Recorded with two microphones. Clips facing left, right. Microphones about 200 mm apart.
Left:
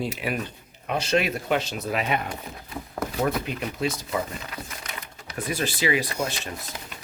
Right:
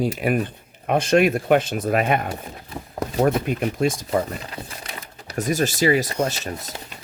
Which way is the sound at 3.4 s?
50° right (ahead or behind).